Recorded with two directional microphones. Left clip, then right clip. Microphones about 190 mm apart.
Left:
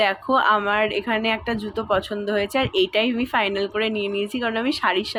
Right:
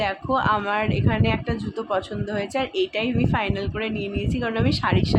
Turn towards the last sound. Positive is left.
turn(degrees=15)  # may be behind; listen again after turning